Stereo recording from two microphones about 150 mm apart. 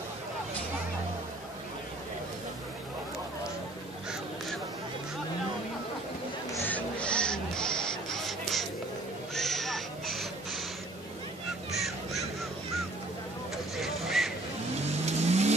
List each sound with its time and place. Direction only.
6.5 s crow: 10° left (ahead or behind)
9.3 s a sound: centre (ahead or behind)
11.8 s crow: centre (ahead or behind)
13.7 s vehicle: centre (ahead or behind)
14.9 s vehicle: 45° right (ahead or behind)